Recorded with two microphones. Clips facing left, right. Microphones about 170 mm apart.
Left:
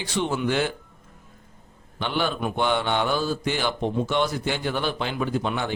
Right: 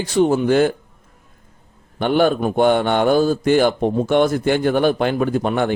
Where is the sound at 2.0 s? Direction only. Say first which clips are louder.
Right 10 dB; 50° right (ahead or behind).